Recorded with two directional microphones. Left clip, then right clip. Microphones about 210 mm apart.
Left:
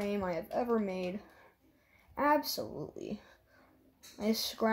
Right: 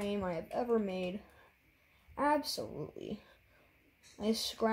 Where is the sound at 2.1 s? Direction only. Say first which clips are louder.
Left 2 dB; 10° left (ahead or behind).